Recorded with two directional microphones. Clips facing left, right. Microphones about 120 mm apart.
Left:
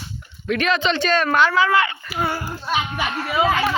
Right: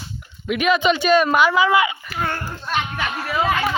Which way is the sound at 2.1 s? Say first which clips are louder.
Left 1 dB; 5° left (ahead or behind).